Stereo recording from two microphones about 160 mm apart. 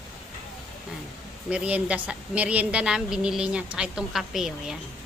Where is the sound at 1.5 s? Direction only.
10° right (ahead or behind).